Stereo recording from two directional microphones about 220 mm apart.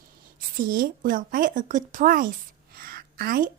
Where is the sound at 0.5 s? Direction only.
40° right (ahead or behind).